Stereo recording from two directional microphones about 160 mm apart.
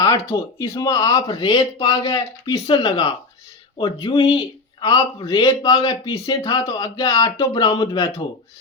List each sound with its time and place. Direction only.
0.0 s speech: 20° left (ahead or behind)